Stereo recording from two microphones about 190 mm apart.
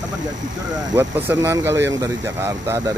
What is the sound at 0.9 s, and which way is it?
Speech, 10° right (ahead or behind).